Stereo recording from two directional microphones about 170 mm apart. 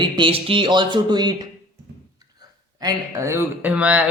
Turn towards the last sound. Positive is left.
turn(degrees=-10)  # may be behind; listen again after turning